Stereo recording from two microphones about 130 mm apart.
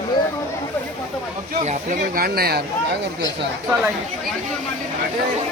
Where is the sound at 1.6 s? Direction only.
75° right (ahead or behind).